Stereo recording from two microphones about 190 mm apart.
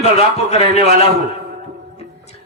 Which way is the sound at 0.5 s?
35° left (ahead or behind).